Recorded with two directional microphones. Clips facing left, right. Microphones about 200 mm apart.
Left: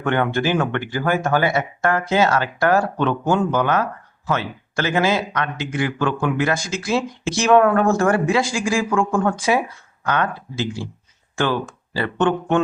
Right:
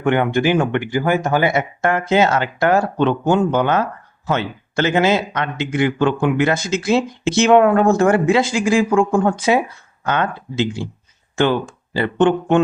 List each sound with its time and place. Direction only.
0.0 s a man's voice: 15° right (ahead or behind)